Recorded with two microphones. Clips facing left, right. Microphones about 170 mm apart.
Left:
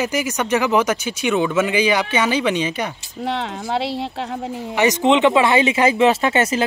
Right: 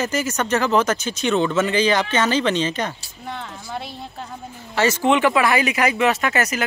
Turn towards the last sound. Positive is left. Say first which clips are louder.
# left 4 dB
turn(degrees=30)  # may be behind; listen again after turning